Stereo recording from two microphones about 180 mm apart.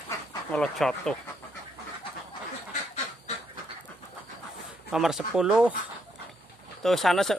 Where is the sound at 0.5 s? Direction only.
5° left (ahead or behind).